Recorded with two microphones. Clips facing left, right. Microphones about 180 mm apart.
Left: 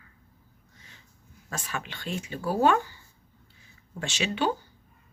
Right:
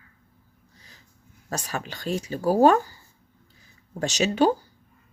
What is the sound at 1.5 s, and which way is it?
Speech, 40° right (ahead or behind).